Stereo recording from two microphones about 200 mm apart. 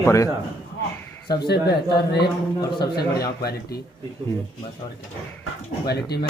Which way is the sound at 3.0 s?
50° left (ahead or behind).